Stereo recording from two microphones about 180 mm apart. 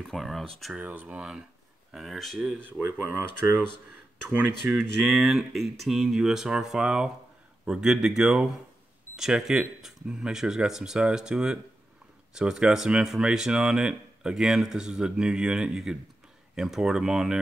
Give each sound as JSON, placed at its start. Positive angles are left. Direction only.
{"t": 0.0, "sound": "speech", "side_deg": 0}
{"t": 4.3, "sound": "speech", "side_deg": -10}